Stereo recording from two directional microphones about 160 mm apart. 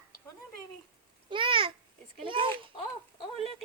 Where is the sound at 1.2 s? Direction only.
30° right (ahead or behind).